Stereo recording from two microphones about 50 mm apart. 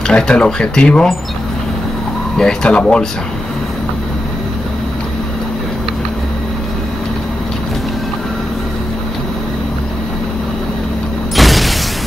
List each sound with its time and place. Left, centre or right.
0.1 s speech: centre
2.3 s speech: centre
11.3 s a sound: centre